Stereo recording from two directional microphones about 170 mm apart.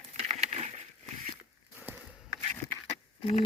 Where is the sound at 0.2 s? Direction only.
40° right (ahead or behind).